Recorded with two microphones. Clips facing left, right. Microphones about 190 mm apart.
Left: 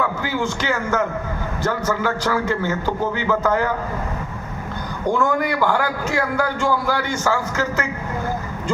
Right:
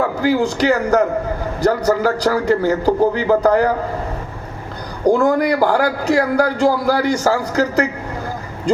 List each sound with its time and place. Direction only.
0.0 s a man's voice: 40° right (ahead or behind)
5.0 s a man's voice: 35° right (ahead or behind)